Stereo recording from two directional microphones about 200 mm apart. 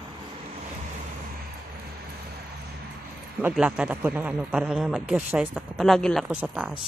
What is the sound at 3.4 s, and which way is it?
A man's voice, 5° right (ahead or behind).